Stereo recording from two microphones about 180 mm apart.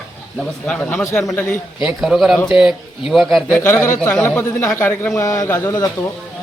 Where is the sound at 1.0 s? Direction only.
20° left (ahead or behind).